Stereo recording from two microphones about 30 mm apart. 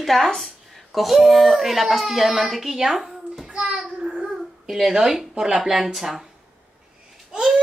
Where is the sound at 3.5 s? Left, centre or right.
Right.